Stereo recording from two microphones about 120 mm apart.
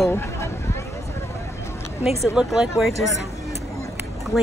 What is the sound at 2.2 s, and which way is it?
Speech, 5° right (ahead or behind).